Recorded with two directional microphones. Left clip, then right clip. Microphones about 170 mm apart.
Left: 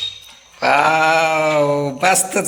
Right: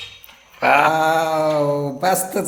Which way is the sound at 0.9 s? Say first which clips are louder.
Left 3 dB; 5° right (ahead or behind).